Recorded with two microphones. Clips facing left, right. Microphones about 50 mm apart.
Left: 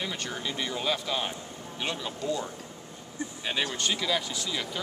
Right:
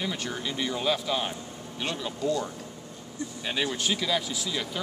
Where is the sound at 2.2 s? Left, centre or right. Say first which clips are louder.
Right 4 dB; left.